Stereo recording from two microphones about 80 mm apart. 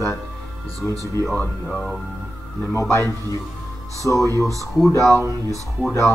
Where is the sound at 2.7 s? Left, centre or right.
Left.